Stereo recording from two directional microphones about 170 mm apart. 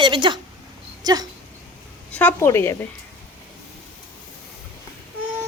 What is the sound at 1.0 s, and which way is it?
Dog, 20° right (ahead or behind).